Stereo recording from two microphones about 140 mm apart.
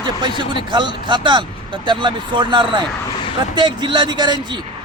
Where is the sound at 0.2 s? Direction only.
35° right (ahead or behind).